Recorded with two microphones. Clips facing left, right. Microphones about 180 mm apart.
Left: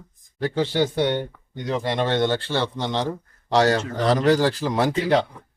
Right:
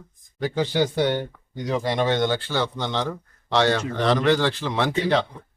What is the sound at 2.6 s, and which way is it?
A man's voice, 35° left (ahead or behind).